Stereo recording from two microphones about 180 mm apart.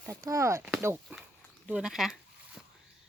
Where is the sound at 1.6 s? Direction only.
5° right (ahead or behind).